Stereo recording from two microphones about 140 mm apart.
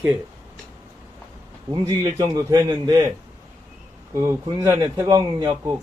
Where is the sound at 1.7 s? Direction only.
25° right (ahead or behind).